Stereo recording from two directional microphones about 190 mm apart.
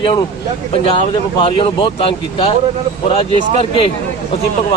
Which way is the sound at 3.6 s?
30° left (ahead or behind).